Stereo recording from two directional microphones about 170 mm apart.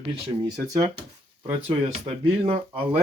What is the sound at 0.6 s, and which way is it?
Speech, 20° right (ahead or behind).